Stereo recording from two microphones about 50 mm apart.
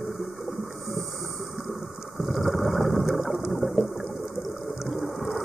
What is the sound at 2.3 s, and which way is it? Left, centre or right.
Mechanisms, centre.